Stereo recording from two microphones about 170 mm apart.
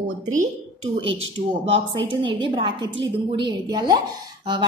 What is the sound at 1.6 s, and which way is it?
A woman's voice, 35° right (ahead or behind).